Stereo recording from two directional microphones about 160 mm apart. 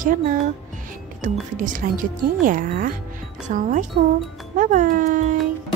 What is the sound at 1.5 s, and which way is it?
Speech, 55° right (ahead or behind).